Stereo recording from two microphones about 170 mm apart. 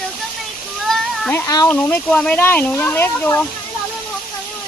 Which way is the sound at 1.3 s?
15° left (ahead or behind).